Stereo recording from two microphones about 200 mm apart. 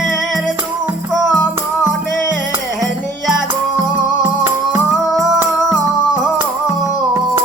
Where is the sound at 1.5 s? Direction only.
10° right (ahead or behind).